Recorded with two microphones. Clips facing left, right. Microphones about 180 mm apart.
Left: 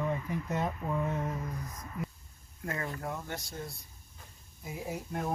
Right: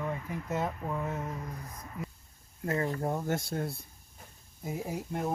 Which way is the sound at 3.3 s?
55° right (ahead or behind).